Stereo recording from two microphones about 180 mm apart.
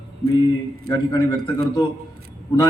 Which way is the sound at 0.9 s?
25° left (ahead or behind).